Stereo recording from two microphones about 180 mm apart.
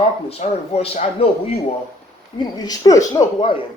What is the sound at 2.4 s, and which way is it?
Speech, 20° left (ahead or behind).